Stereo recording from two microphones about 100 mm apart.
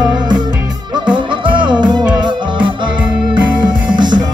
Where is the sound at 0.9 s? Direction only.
55° right (ahead or behind).